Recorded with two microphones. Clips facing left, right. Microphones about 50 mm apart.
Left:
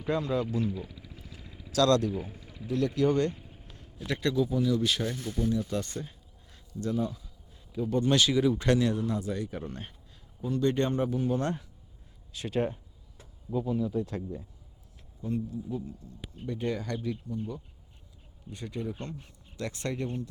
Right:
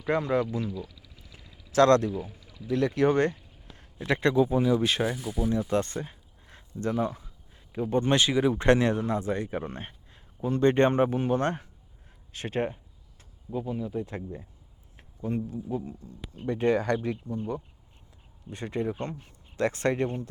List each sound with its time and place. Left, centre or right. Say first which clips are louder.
0.1 s a man's voice: right 3 dB; right
0.6 s a sound: left 1 dB; left
1.4 s vehicle: left 5 dB; left
1.7 s a man's voice: right 4 dB; right
2.3 s a sound: left 2 dB; left
2.6 s a man's voice: right 3 dB; right
5.0 s speech: right 2 dB; centre
5.5 s a man's voice: right 6 dB; right
13.5 s a man's voice: left 2 dB; centre
16.5 s speech: right 8 dB; right
18.5 s speech: right 5 dB; right